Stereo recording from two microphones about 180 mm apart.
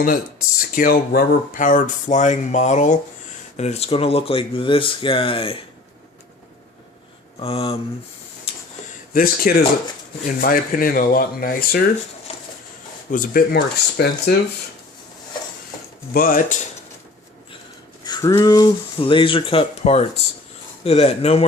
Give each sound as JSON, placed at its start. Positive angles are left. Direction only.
{"t": 0.8, "sound": "speech", "side_deg": 55}
{"t": 7.4, "sound": "speech", "side_deg": 35}
{"t": 9.1, "sound": "speech", "side_deg": 55}
{"t": 12.3, "sound": "a sound", "side_deg": 35}
{"t": 13.1, "sound": "speech", "side_deg": 50}
{"t": 16.1, "sound": "speech", "side_deg": 50}
{"t": 18.0, "sound": "speech", "side_deg": 20}